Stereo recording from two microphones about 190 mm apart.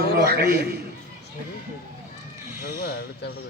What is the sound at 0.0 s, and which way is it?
Speech, 55° right (ahead or behind).